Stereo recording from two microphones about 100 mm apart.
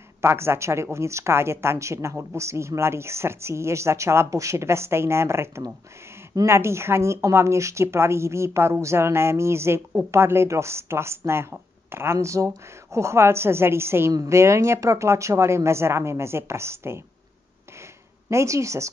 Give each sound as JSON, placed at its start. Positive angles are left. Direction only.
{"t": 0.2, "sound": "a woman's voice", "side_deg": -25}
{"t": 18.3, "sound": "speech", "side_deg": -30}